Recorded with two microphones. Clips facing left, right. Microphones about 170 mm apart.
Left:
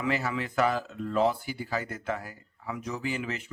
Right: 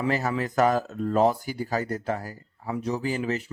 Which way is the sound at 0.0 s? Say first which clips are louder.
Right 4 dB; 40° right (ahead or behind).